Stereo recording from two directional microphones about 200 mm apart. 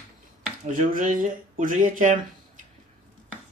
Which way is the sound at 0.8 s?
40° right (ahead or behind).